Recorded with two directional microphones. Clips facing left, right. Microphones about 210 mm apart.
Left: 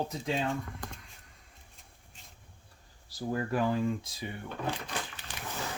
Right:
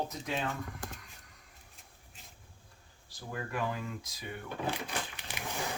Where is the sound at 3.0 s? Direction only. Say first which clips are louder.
Left 8 dB; 35° left (ahead or behind).